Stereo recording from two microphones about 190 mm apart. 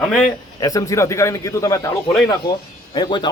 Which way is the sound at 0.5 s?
20° left (ahead or behind).